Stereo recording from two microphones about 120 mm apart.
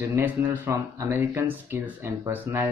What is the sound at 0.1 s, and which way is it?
Speech, 15° right (ahead or behind).